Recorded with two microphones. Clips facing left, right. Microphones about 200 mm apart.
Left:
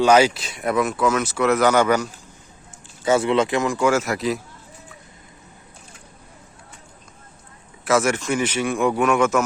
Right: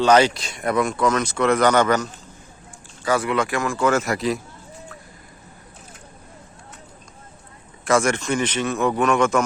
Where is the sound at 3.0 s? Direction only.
25° left (ahead or behind); by 4.4 s centre (ahead or behind).